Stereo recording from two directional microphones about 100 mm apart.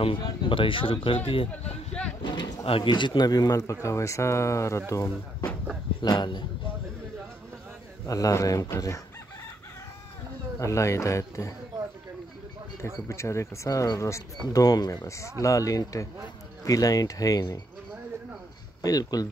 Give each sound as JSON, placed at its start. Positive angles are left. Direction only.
{"t": 0.2, "sound": "speech", "side_deg": 55}
{"t": 2.2, "sound": "speech", "side_deg": 45}
{"t": 2.6, "sound": "a man's voice", "side_deg": 60}
{"t": 6.0, "sound": "a man's voice", "side_deg": 50}
{"t": 8.1, "sound": "speech", "side_deg": 35}
{"t": 10.6, "sound": "speech", "side_deg": 30}
{"t": 12.8, "sound": "speech", "side_deg": 30}
{"t": 15.0, "sound": "speech", "side_deg": 30}
{"t": 18.8, "sound": "speech", "side_deg": 40}